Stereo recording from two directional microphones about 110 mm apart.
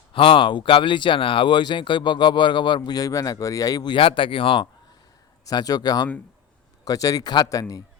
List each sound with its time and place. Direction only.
0.1 s speech: 50° left (ahead or behind); by 3.9 s 35° left (ahead or behind)
3.9 s speech: 50° left (ahead or behind)
5.5 s speech: 35° left (ahead or behind)